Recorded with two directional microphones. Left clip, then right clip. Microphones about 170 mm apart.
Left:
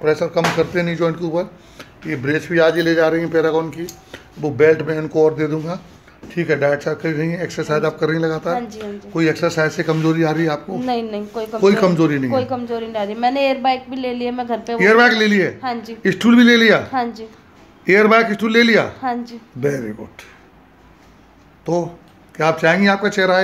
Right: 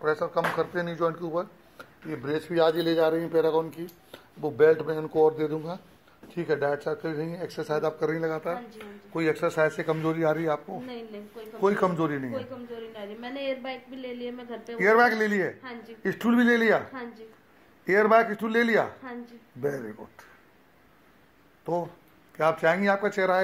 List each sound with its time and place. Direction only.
0.0 s a man's voice: 5° left (ahead or behind)
10.9 s a woman's voice: 45° left (ahead or behind)
11.8 s a man's voice: 5° right (ahead or behind)
12.3 s a woman's voice: 35° left (ahead or behind)
14.9 s a man's voice: 5° right (ahead or behind)
15.6 s a woman's voice: 25° left (ahead or behind)
16.0 s a man's voice: centre (ahead or behind)
16.9 s a woman's voice: 25° left (ahead or behind)
17.8 s a man's voice: 5° right (ahead or behind)
19.0 s a woman's voice: 20° left (ahead or behind)
22.4 s speech: 10° right (ahead or behind)